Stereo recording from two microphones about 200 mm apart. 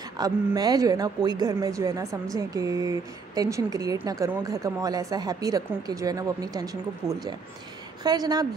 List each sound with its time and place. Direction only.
0.2 s a woman's voice: 20° right (ahead or behind)